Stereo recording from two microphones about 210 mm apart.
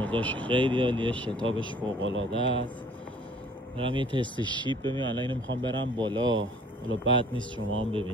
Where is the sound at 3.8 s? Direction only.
25° right (ahead or behind).